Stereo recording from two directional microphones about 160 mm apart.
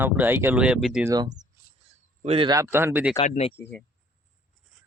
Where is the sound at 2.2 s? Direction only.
40° right (ahead or behind).